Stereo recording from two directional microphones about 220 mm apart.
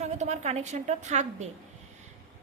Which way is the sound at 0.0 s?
30° right (ahead or behind).